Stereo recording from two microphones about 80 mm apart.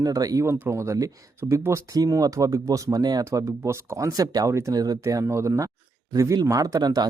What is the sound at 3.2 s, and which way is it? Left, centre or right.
Speech, right.